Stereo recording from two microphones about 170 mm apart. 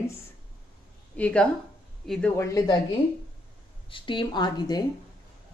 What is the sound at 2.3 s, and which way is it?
Speech, 20° left (ahead or behind).